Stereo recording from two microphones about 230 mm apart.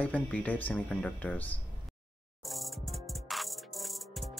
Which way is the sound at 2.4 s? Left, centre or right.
Centre.